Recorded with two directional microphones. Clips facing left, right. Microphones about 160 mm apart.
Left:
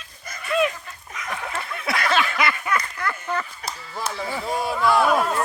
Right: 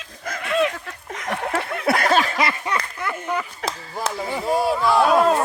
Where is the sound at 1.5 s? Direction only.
60° right (ahead or behind); by 2.7 s 30° right (ahead or behind).